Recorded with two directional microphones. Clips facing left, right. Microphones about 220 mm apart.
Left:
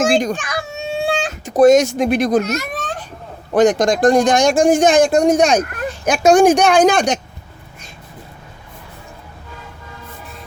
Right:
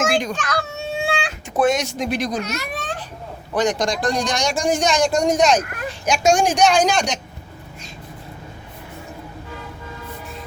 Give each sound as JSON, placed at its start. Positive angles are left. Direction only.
{"t": 0.0, "sound": "a child's voice", "side_deg": 45}
{"t": 0.3, "sound": "a child's voice", "side_deg": 15}
{"t": 1.0, "sound": "speech", "side_deg": 40}